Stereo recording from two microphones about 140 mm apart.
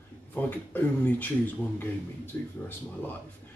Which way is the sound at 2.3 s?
15° left (ahead or behind).